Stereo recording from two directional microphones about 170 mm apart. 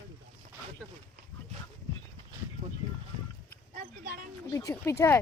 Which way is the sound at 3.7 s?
50° right (ahead or behind).